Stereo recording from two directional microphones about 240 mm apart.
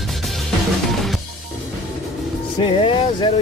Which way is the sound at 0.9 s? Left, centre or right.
Centre.